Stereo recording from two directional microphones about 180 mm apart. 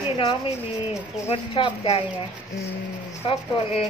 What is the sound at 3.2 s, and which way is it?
Speech, 30° left (ahead or behind).